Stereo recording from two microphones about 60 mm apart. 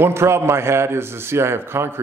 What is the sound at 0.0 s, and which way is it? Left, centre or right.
A man's voice, right.